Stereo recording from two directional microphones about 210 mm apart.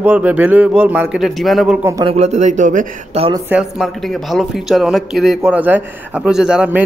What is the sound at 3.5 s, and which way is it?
A man's voice, centre (ahead or behind).